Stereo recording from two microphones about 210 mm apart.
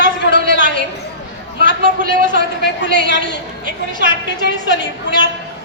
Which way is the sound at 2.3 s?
55° left (ahead or behind).